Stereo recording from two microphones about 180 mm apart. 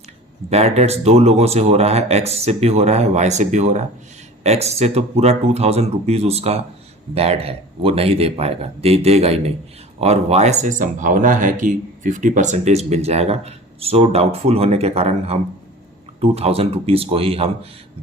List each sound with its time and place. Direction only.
0.5 s speech: 35° right (ahead or behind)